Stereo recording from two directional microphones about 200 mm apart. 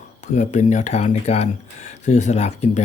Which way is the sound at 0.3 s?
35° left (ahead or behind).